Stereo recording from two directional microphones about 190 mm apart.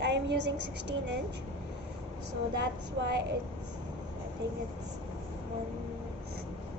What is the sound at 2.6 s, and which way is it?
Speech, 60° right (ahead or behind).